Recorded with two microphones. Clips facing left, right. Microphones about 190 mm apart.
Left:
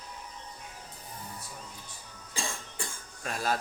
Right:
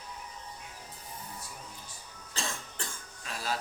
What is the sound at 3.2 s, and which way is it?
Speech, 50° left (ahead or behind).